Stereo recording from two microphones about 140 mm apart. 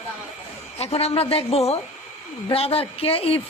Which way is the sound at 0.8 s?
45° left (ahead or behind).